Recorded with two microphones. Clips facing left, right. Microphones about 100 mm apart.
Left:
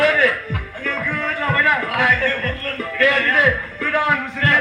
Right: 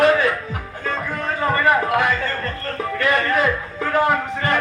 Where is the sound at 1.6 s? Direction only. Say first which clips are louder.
Right 2 dB; 30° right (ahead or behind).